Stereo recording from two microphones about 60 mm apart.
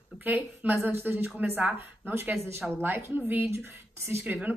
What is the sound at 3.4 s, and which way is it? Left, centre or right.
Speech, right.